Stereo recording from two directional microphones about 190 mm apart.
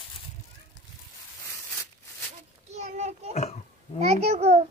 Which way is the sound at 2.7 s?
35° right (ahead or behind).